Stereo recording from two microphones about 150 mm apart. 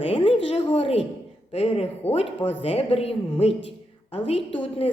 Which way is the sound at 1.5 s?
40° left (ahead or behind).